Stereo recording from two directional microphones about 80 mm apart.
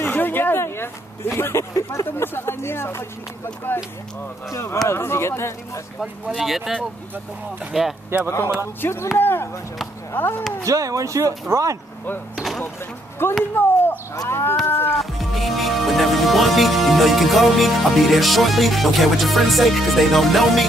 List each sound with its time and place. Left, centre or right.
0.0 s a sound: left
2.0 s speech: left
4.5 s speech: left
6.2 s speech: centre
7.7 s speech: centre
8.8 s speech: left
10.6 s speech: right
12.4 s a sound: centre
13.4 s speech: left
14.7 s music: left
15.0 s speech: centre